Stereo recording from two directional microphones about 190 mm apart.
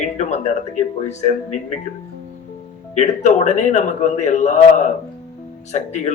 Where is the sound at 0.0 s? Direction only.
40° left (ahead or behind).